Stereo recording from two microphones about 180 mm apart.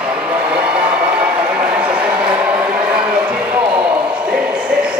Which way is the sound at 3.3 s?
5° right (ahead or behind).